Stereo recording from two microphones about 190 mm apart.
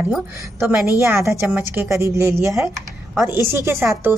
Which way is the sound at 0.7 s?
10° right (ahead or behind).